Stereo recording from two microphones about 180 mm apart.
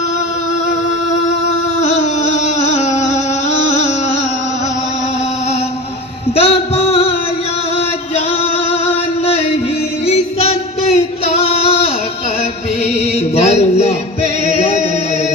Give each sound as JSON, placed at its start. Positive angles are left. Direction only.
{"t": 1.8, "sound": "music", "side_deg": 40}
{"t": 6.3, "sound": "music", "side_deg": 35}
{"t": 10.1, "sound": "singing", "side_deg": 35}
{"t": 13.3, "sound": "a sound", "side_deg": 35}
{"t": 14.4, "sound": "music", "side_deg": 35}